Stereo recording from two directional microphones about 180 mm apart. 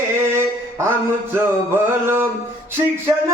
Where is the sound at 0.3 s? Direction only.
15° right (ahead or behind).